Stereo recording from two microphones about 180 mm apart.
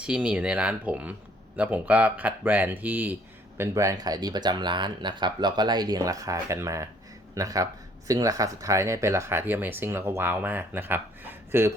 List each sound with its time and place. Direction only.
0.0 s speech: 5° right (ahead or behind)